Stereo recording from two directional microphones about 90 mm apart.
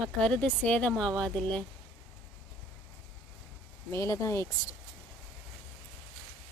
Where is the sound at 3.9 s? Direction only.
35° left (ahead or behind).